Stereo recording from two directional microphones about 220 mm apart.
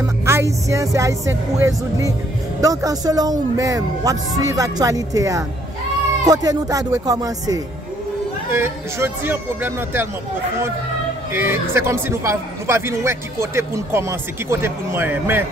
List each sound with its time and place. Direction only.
0.0 s a man's voice: 10° right (ahead or behind)
11.3 s a man's voice: 10° right (ahead or behind)